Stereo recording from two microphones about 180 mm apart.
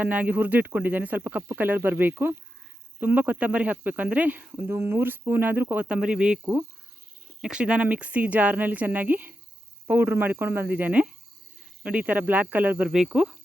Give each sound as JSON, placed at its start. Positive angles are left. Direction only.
{"t": 0.0, "sound": "a woman's voice", "side_deg": -10}